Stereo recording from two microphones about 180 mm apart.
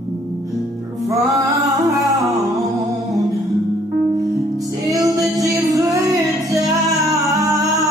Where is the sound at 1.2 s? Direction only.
20° right (ahead or behind).